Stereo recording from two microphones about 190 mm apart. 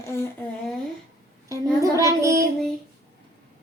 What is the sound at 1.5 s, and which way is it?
Speech, 15° right (ahead or behind).